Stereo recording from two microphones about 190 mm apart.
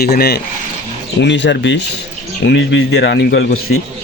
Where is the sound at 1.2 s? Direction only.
70° left (ahead or behind).